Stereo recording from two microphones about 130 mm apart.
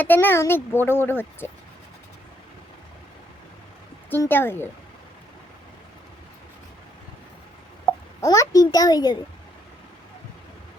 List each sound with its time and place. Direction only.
0.0 s a child's voice: 15° left (ahead or behind)
4.1 s a child's voice: 15° left (ahead or behind)
8.2 s a child's voice: 25° left (ahead or behind)